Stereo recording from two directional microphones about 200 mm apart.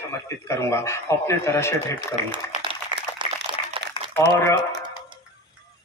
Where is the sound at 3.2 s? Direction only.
25° right (ahead or behind).